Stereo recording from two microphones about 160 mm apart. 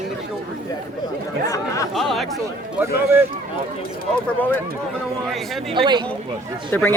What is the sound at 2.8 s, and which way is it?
Speech, 15° right (ahead or behind).